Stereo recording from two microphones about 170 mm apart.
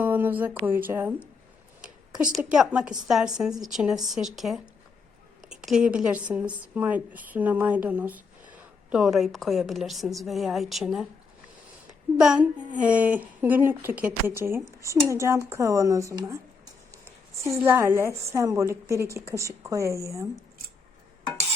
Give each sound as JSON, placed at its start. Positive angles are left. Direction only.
{"t": 0.0, "sound": "speech", "side_deg": -10}
{"t": 2.3, "sound": "a woman's voice", "side_deg": -5}
{"t": 12.1, "sound": "a woman's voice", "side_deg": -5}
{"t": 17.6, "sound": "a woman's voice", "side_deg": -15}